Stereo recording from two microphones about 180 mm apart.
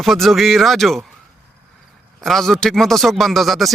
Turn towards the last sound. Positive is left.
turn(degrees=0)  # may be behind; listen again after turning